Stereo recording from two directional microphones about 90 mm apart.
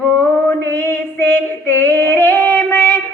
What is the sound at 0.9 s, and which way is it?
Female singing, 25° left (ahead or behind).